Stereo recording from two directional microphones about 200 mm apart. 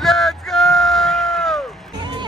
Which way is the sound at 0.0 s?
Centre (ahead or behind).